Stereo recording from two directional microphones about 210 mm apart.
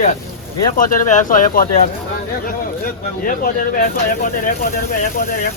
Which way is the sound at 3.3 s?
40° left (ahead or behind).